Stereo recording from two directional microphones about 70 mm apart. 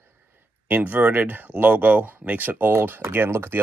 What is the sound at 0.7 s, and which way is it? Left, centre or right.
Speech, right.